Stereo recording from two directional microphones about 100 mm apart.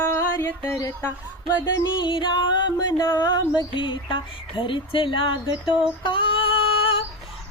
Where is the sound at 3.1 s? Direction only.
50° left (ahead or behind); by 7.0 s 65° left (ahead or behind).